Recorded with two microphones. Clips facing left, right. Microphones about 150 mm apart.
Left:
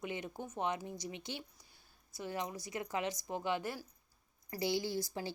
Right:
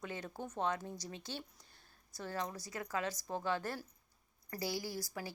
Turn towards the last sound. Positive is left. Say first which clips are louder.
# left 4 dB
turn(degrees=25)  # may be behind; listen again after turning